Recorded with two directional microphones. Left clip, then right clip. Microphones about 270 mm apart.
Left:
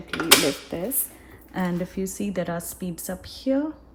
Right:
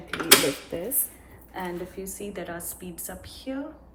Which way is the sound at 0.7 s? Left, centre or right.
Left.